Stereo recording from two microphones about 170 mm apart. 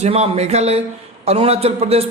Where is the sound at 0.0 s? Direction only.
40° right (ahead or behind).